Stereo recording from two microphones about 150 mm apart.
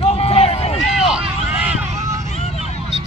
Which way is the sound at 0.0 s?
40° left (ahead or behind).